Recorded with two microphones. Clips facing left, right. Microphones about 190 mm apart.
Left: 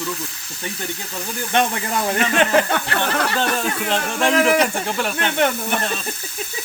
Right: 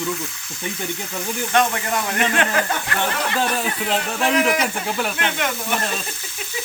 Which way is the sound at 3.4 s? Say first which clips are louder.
Left 1 dB; 5° right (ahead or behind).